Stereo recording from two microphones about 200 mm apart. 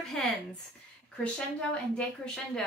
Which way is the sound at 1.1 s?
5° left (ahead or behind).